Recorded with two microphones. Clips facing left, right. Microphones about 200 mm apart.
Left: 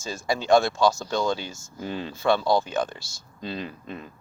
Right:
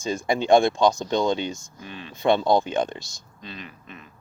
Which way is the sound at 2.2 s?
20° right (ahead or behind).